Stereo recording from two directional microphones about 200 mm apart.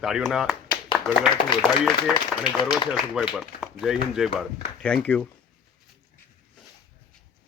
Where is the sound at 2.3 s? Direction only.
Centre (ahead or behind).